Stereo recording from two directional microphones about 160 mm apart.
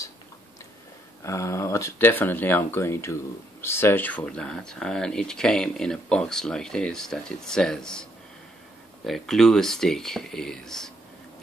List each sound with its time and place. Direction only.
1.2 s speech: 20° left (ahead or behind); by 10.9 s 5° left (ahead or behind)